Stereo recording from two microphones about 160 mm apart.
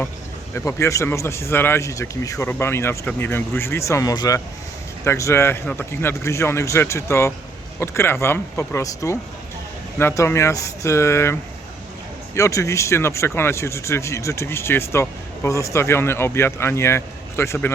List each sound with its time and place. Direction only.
0.5 s speech: 15° left (ahead or behind)